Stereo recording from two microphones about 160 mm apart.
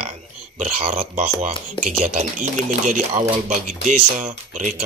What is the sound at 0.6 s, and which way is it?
Speech, 45° right (ahead or behind).